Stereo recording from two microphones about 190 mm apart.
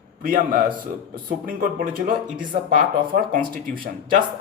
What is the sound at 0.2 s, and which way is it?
Speech, 50° right (ahead or behind).